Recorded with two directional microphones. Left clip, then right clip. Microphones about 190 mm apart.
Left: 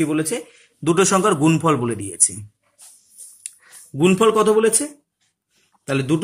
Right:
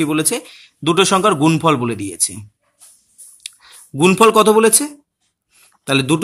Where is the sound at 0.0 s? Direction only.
40° right (ahead or behind).